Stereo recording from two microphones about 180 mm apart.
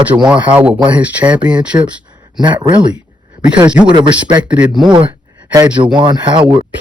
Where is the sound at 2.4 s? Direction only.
25° right (ahead or behind).